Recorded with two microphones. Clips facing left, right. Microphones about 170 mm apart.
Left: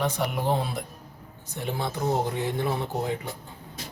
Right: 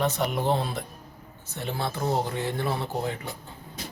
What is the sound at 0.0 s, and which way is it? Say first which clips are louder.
A man's voice: right 1 dB; 10° left (ahead or behind).